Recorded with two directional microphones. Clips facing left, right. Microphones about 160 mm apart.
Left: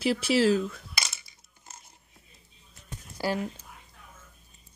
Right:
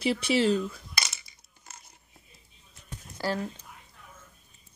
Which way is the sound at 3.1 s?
15° left (ahead or behind).